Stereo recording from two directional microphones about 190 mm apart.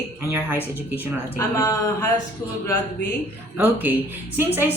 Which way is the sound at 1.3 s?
15° left (ahead or behind).